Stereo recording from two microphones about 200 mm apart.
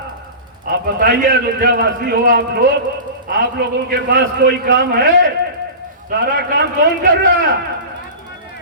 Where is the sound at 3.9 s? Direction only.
50° right (ahead or behind).